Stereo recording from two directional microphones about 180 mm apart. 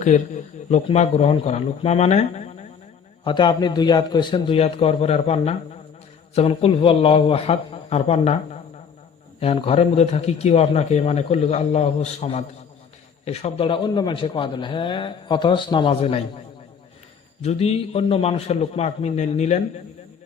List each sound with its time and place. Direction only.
0.7 s a man's voice: 40° left (ahead or behind)
3.2 s a man's voice: 25° left (ahead or behind)
17.4 s a man's voice: 35° left (ahead or behind)